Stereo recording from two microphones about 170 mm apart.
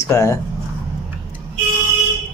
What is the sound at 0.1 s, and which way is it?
Speech, 15° left (ahead or behind).